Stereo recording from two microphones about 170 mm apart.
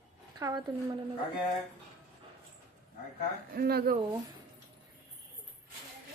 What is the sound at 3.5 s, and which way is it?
Speech, 65° right (ahead or behind).